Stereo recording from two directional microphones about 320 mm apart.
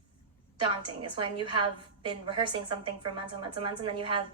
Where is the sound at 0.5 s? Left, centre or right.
Centre.